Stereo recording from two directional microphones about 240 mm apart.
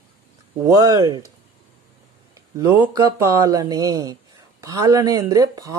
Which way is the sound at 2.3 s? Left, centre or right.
Centre.